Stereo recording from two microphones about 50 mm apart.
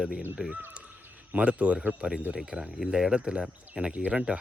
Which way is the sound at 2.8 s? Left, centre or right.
Centre.